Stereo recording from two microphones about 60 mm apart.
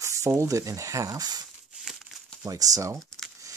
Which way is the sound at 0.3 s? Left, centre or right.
Right.